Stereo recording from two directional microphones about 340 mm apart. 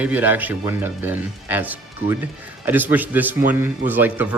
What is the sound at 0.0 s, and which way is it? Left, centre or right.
Speech, centre.